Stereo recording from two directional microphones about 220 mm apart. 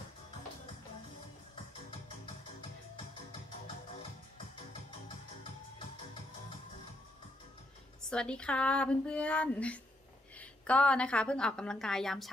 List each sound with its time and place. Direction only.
5.0 s music: 20° left (ahead or behind)
8.1 s speech: 5° left (ahead or behind)